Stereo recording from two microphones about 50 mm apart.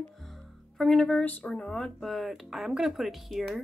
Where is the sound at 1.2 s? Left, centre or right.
Left.